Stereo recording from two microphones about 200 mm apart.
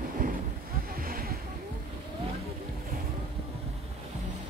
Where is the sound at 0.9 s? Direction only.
45° right (ahead or behind).